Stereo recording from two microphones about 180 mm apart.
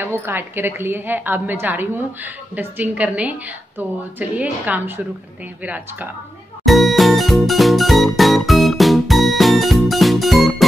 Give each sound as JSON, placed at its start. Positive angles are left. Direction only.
{"t": 0.0, "sound": "a woman's voice", "side_deg": -10}
{"t": 6.6, "sound": "music", "side_deg": 0}